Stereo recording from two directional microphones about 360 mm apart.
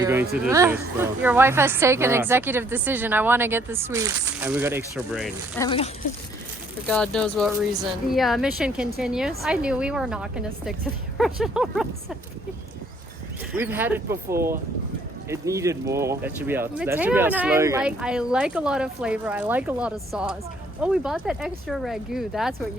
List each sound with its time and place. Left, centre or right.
0.0 s speech: centre
5.6 s speech: centre
6.8 s speech: centre
13.5 s speech: centre